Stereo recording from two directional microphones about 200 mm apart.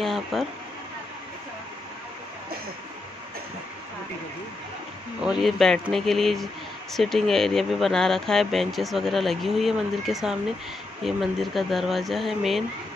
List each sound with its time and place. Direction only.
0.0 s speech: centre (ahead or behind)
5.2 s speech: centre (ahead or behind)